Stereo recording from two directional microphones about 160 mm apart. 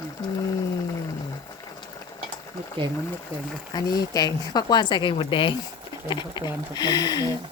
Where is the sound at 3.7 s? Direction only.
25° left (ahead or behind).